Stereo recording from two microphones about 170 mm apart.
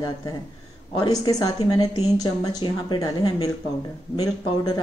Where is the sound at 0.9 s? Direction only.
25° left (ahead or behind).